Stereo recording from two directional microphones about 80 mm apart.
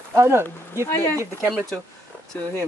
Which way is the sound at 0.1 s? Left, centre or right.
Right.